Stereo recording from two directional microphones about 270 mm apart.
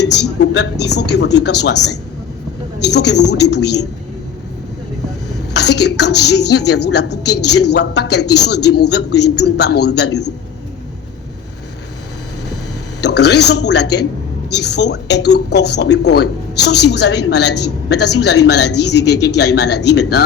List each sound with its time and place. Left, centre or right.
0.0 s speech: left
5.3 s speech: left
13.0 s speech: left